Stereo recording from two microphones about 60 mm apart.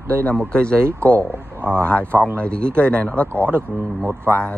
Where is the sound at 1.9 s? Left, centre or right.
Left.